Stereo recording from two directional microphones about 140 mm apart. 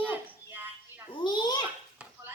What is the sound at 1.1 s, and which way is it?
Babbling, 35° left (ahead or behind).